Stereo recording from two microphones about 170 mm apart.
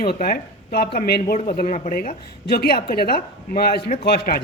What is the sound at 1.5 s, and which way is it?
Speech, 45° left (ahead or behind).